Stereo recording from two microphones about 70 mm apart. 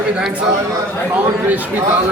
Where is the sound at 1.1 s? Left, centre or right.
Right.